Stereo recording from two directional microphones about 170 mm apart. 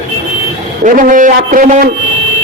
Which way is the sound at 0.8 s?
50° right (ahead or behind).